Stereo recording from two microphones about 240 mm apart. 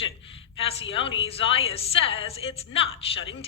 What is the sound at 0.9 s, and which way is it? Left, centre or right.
A woman's voice, left.